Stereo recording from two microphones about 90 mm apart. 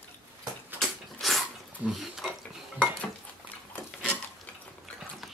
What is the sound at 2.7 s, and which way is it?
Dishes, 15° left (ahead or behind).